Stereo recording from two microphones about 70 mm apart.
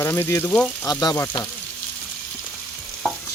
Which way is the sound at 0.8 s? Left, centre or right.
Left.